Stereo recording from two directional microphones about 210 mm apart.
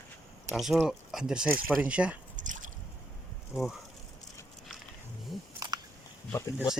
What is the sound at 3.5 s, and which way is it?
Speech, centre (ahead or behind).